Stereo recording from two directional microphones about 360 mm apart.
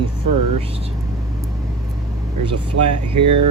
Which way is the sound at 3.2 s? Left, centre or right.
Right.